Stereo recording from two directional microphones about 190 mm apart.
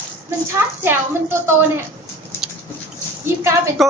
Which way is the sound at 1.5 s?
10° right (ahead or behind).